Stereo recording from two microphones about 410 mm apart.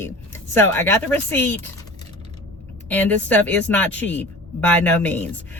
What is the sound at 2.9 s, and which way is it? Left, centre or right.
Speech, centre.